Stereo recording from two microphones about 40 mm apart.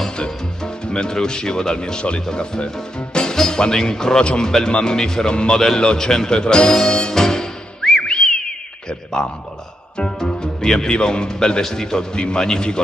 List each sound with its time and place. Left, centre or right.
0.2 s speech: left
6.9 s music: centre
8.1 s whistling: centre
8.8 s a sound: centre
9.9 s speech: centre